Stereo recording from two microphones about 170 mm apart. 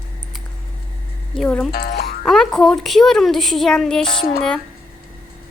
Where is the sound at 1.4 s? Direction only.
5° left (ahead or behind).